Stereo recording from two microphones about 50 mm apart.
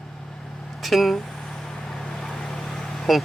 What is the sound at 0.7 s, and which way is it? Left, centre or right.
Vehicle, centre.